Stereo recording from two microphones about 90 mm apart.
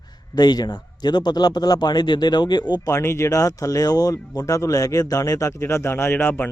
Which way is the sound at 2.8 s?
30° left (ahead or behind).